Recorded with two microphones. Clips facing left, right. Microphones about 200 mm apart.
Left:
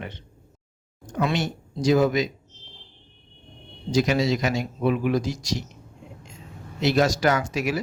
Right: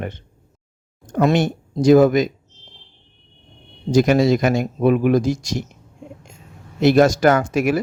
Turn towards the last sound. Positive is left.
turn(degrees=-50)  # may be behind; listen again after turning